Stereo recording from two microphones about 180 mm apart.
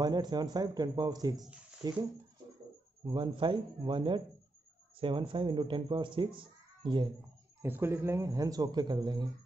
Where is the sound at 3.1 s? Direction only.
25° right (ahead or behind).